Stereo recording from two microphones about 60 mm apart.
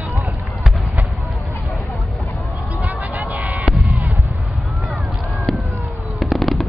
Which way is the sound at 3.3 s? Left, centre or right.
Right.